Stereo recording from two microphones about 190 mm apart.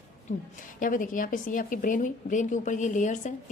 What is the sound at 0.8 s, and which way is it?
A woman's voice, 45° left (ahead or behind).